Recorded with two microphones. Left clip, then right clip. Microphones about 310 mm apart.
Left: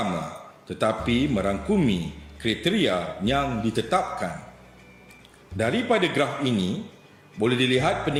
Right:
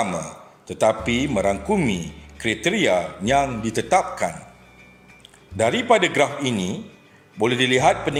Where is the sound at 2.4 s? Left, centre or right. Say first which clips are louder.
Right 4 dB; centre.